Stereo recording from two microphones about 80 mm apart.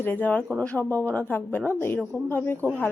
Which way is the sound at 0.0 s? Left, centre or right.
Left.